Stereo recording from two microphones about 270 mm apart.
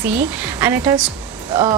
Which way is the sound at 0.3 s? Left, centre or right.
Centre.